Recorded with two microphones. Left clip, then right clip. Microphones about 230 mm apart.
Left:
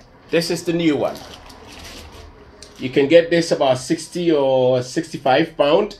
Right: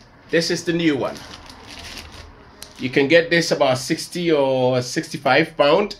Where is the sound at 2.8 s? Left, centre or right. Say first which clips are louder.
Left 2 dB; right.